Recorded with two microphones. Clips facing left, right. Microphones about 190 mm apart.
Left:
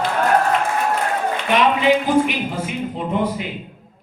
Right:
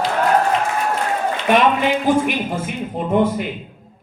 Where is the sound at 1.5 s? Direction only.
50° right (ahead or behind).